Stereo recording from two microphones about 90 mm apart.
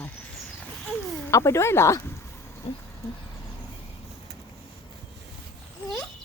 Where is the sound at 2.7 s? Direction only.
90° left.